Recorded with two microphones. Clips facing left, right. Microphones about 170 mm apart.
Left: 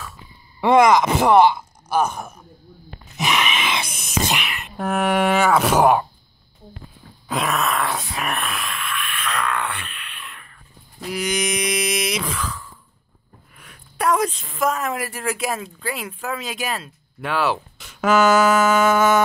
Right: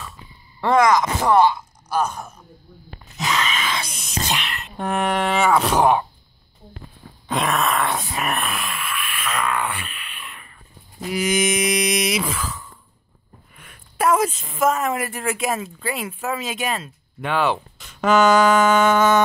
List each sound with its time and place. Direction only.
0.7 s speech: 25° left (ahead or behind)
1.0 s speech: 10° left (ahead or behind)
3.2 s a sound: 15° left (ahead or behind)
3.8 s a woman's voice: 5° left (ahead or behind)
4.3 s whispering: 10° left (ahead or behind)
4.7 s a woman's voice: 5° left (ahead or behind)
7.2 s a sound: centre (ahead or behind)
13.6 s a woman's voice: centre (ahead or behind)